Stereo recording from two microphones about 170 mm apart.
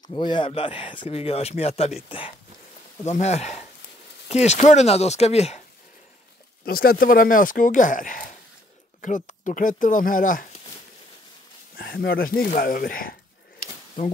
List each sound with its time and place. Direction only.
0.1 s speech: 25° left (ahead or behind)
6.6 s speech: 60° left (ahead or behind)
11.7 s speech: 65° left (ahead or behind)